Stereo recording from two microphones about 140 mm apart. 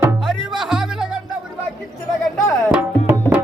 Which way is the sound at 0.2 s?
Centre (ahead or behind).